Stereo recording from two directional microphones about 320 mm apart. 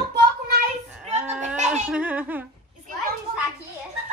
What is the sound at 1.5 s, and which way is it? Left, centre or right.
Laughter, right.